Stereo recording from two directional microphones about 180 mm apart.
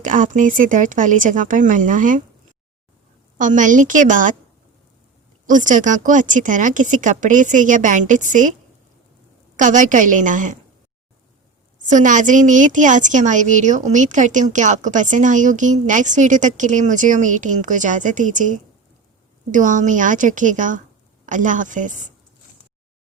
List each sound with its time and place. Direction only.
0.0 s a woman's voice: 45° right (ahead or behind)
3.3 s a woman's voice: 45° right (ahead or behind)
5.5 s a woman's voice: 45° right (ahead or behind)
9.6 s a woman's voice: 45° right (ahead or behind)
11.9 s a woman's voice: 45° right (ahead or behind)